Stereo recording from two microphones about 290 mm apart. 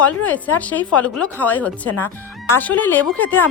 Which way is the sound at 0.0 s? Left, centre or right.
Centre.